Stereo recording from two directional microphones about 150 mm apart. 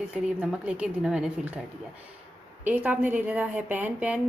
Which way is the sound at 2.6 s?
10° right (ahead or behind).